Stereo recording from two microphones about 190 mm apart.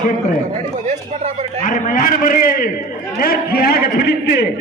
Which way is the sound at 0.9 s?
40° right (ahead or behind).